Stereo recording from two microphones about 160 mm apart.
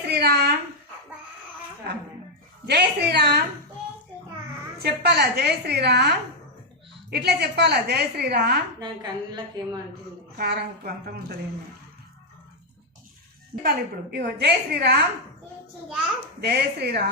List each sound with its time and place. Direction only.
0.1 s a sound: 85° right
2.6 s a woman's voice: 90° right
4.8 s a woman's voice: 90° right
8.8 s a woman's voice: 25° right (ahead or behind)
10.3 s a woman's voice: 80° right
13.6 s a woman's voice: 80° right
16.4 s a woman's voice: 90° right